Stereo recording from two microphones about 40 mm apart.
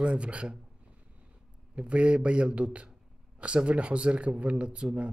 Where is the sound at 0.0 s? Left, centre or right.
Right.